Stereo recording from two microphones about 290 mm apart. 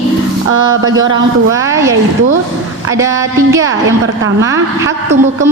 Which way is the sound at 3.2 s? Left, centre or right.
Centre.